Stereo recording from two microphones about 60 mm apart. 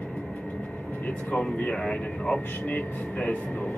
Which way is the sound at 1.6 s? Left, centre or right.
Centre.